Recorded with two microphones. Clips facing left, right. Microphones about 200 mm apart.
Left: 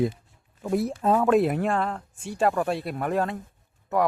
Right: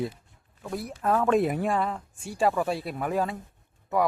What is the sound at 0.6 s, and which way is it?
Speech, 20° left (ahead or behind).